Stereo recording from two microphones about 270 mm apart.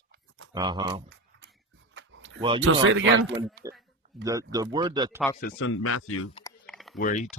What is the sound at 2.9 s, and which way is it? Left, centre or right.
Speech, right.